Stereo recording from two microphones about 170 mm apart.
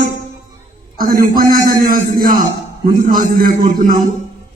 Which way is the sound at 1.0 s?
55° right (ahead or behind).